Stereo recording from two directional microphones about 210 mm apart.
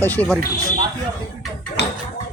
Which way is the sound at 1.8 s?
55° left (ahead or behind).